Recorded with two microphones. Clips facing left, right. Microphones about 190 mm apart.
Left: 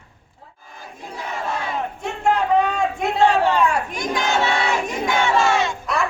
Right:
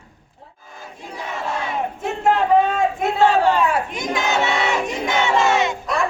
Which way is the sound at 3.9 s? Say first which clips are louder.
Even; 20° right (ahead or behind).